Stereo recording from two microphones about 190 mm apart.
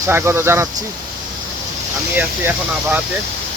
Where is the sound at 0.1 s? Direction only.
15° right (ahead or behind).